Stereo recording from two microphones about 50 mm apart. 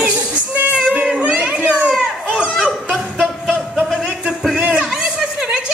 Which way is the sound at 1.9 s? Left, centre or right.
Centre.